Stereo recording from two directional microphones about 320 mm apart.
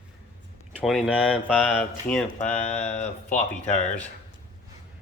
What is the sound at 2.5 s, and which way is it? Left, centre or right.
Speech, left.